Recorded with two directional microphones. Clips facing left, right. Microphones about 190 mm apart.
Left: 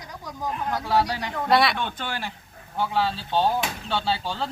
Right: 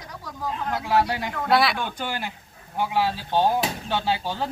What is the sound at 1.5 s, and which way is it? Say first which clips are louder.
Speech: even; centre (ahead or behind).